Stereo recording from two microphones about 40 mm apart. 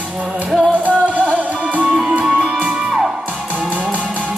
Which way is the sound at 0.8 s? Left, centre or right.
Right.